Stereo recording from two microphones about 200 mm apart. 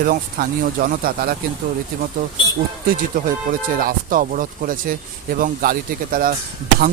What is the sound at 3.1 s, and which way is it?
Speech, 45° right (ahead or behind).